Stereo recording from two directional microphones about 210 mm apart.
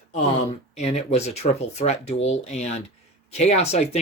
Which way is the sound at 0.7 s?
30° left (ahead or behind).